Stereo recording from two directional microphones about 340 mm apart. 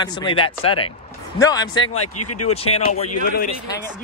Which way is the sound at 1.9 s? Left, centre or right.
Left.